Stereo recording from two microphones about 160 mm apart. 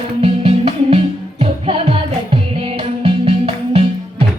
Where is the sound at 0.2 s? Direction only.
40° right (ahead or behind).